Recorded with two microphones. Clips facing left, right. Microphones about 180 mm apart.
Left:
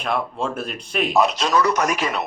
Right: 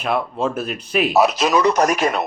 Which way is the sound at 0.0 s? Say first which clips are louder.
Right 3 dB; 5° right (ahead or behind).